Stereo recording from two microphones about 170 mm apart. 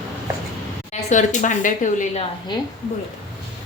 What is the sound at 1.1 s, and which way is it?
A woman's voice, 45° left (ahead or behind).